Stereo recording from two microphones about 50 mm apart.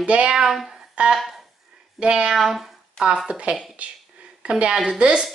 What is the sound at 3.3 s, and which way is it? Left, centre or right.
A woman's voice, right.